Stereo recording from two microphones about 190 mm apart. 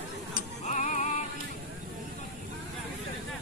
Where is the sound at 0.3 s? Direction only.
40° left (ahead or behind).